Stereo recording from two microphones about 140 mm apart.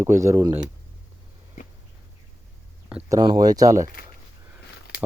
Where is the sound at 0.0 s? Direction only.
20° right (ahead or behind).